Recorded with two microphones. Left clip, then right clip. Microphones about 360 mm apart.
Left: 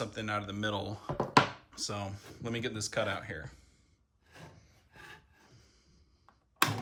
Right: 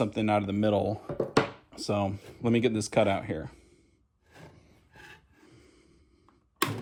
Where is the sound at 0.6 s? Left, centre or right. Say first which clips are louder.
Right 9 dB; centre.